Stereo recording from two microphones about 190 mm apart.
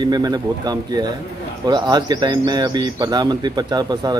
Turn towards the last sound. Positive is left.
turn(degrees=-20)  # may be behind; listen again after turning